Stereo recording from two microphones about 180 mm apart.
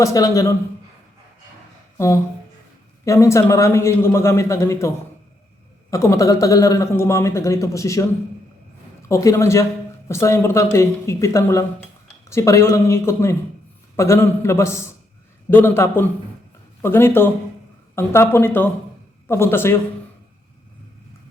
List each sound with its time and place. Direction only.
0.0 s a man's voice: 20° left (ahead or behind)
3.0 s a man's voice: 15° left (ahead or behind)
5.9 s a man's voice: 15° left (ahead or behind)
9.0 s a man's voice: 15° left (ahead or behind)